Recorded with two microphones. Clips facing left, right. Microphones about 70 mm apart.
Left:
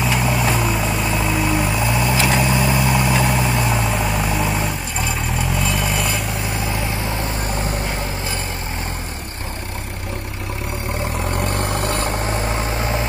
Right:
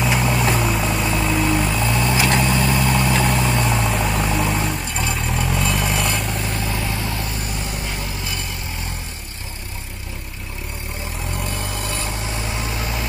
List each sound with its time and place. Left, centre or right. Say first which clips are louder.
0.0 s vehicle: even; centre
6.6 s vehicle: left 1 dB; left
11.3 s vehicle: left 5 dB; left